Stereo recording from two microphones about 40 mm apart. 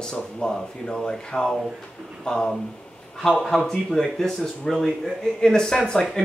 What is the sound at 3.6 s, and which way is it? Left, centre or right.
Speech, centre.